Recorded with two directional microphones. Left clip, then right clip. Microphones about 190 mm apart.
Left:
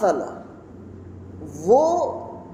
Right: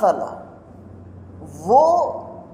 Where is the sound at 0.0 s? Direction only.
20° right (ahead or behind).